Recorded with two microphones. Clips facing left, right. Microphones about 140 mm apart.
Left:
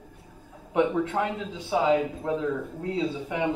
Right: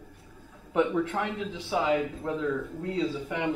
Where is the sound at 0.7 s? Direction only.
20° left (ahead or behind).